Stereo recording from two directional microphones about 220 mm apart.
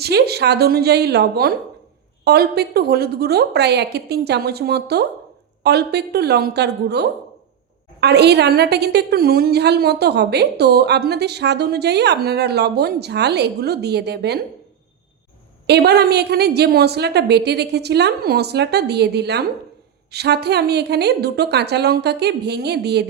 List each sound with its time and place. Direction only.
0.0 s a woman's voice: 45° right (ahead or behind)
15.6 s a woman's voice: 50° right (ahead or behind)